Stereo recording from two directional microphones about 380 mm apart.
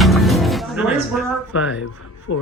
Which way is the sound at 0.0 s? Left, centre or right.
Centre.